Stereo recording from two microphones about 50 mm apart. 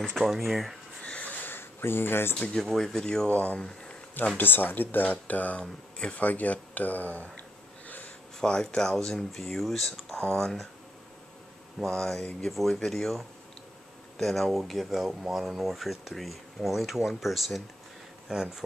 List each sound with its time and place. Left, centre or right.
0.2 s speech: centre
1.0 s a sound: left
1.4 s a sound: left
2.5 s speech: centre
3.3 s speech: left
3.6 s a sound: left
4.4 s speech: left
5.6 s speech: centre
6.2 s speech: left
7.8 s a sound: left
8.4 s speech: centre
11.8 s speech: centre
12.4 s speech: centre